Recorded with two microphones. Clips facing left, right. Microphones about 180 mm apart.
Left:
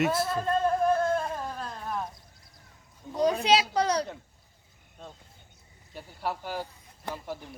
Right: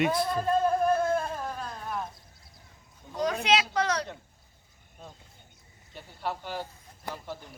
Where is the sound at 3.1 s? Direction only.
30° left (ahead or behind).